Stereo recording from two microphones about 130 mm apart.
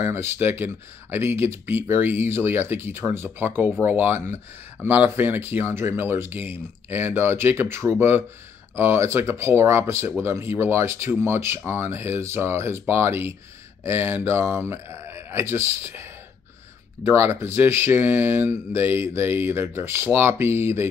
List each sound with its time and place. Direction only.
0.0 s speech: 20° right (ahead or behind)